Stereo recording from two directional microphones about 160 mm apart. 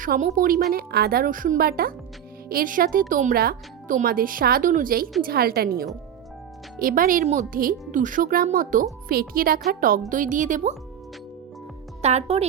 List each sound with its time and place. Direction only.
0.0 s speech: 55° right (ahead or behind)
0.7 s a woman's voice: 70° right (ahead or behind)
5.2 s a woman's voice: 70° right (ahead or behind)
6.7 s speech: 60° right (ahead or behind)
10.1 s a woman's voice: 55° right (ahead or behind)
12.0 s a woman's voice: 40° right (ahead or behind)